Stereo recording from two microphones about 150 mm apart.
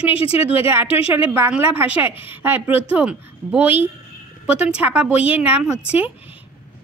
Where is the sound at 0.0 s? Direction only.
40° left (ahead or behind).